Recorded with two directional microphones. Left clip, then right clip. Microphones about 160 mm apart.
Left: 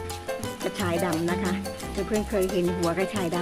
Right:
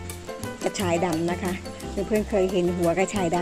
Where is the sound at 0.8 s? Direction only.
20° right (ahead or behind).